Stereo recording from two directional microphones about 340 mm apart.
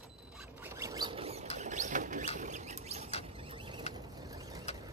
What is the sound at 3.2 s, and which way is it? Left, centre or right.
Creak, centre.